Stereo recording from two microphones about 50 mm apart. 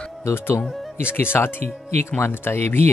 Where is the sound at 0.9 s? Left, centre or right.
Left.